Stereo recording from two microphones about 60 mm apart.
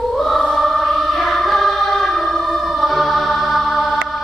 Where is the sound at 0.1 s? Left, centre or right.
Centre.